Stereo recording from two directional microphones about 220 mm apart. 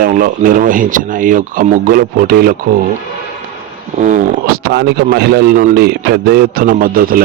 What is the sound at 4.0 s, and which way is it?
Speech, 35° right (ahead or behind).